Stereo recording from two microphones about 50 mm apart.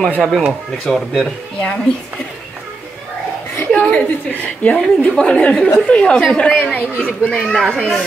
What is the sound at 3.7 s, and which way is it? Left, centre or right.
Chuckle, left.